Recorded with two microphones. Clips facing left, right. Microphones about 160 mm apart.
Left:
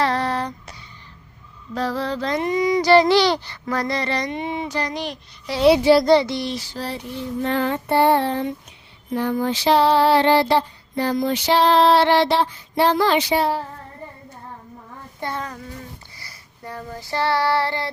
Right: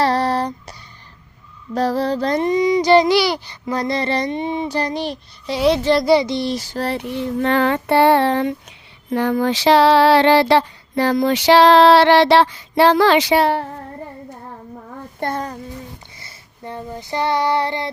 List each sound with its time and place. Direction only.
0.0 s a sound: 35° right (ahead or behind)
1.7 s mantra: 40° right (ahead or behind)
2.6 s child singing: 20° right (ahead or behind)
5.6 s speech: 5° left (ahead or behind)
6.1 s speech: 15° right (ahead or behind)
6.5 s a sound: 45° right (ahead or behind)
6.8 s child singing: 65° right (ahead or behind); by 8.5 s 85° right
9.0 s a sound: 80° right
15.2 s mantra: 40° right (ahead or behind)
16.2 s child singing: 25° right (ahead or behind)